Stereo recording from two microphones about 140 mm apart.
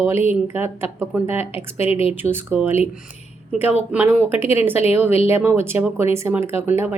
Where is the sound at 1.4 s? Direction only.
45° left (ahead or behind).